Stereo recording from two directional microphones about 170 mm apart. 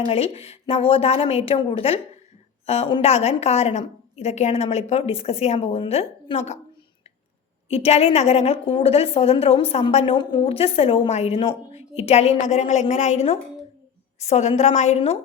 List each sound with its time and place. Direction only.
0.1 s a woman's voice: 35° left (ahead or behind)
7.7 s a woman's voice: 35° left (ahead or behind)